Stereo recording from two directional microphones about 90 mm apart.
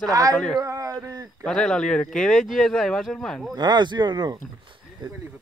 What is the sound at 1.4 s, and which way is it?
Speech, 5° left (ahead or behind).